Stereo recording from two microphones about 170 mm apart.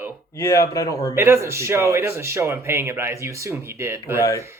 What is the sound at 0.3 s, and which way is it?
Speech, 20° left (ahead or behind).